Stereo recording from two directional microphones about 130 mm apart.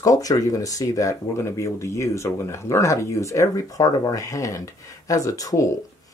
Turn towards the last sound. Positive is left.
turn(degrees=25)  # may be behind; listen again after turning